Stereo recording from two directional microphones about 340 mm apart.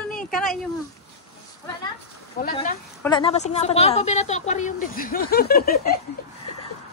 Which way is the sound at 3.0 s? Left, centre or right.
Centre.